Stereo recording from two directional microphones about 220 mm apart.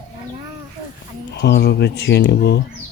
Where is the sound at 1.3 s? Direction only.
45° left (ahead or behind).